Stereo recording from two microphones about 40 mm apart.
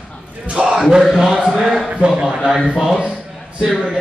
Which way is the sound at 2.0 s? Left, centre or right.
Right.